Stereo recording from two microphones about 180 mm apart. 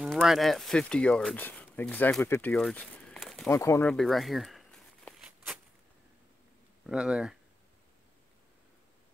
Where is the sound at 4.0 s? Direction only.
Centre (ahead or behind).